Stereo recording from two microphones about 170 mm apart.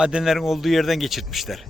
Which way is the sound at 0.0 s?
5° right (ahead or behind).